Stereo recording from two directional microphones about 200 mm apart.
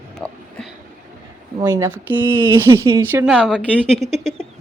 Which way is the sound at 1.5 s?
20° right (ahead or behind).